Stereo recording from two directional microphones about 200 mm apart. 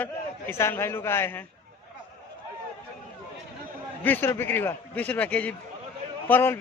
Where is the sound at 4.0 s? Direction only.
10° left (ahead or behind).